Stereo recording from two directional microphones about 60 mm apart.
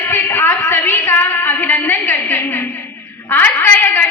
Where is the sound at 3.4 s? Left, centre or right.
Left.